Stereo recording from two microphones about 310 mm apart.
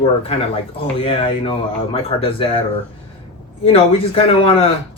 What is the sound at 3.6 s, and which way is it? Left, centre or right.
Speech, centre.